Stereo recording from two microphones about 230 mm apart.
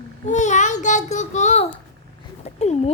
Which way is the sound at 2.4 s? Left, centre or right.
Left.